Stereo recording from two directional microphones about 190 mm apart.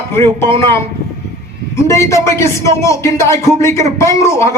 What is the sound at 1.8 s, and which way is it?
Speech, 15° left (ahead or behind).